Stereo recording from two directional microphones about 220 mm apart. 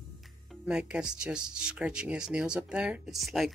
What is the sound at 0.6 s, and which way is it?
Speech, 5° right (ahead or behind).